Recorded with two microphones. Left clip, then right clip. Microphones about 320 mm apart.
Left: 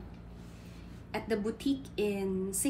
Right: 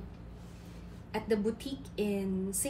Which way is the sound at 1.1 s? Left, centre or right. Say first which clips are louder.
Right 2 dB; centre.